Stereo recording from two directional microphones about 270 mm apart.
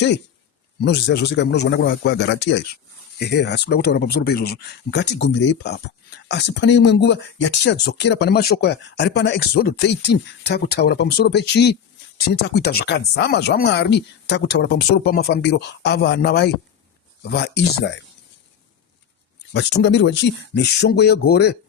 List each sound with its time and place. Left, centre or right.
0.8 s speech: left
19.5 s speech: left